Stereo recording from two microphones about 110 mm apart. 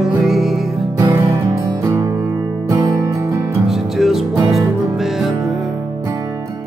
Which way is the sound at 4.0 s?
Centre (ahead or behind).